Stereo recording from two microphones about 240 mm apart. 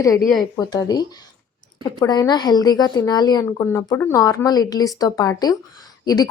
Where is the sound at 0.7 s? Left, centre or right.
Centre.